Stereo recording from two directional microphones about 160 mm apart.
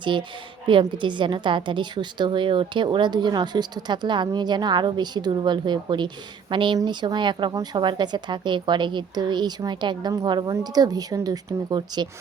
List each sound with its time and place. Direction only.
0.0 s a woman's voice: 30° right (ahead or behind)